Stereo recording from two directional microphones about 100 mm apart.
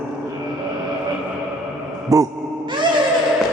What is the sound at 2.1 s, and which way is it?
Speech, 30° right (ahead or behind).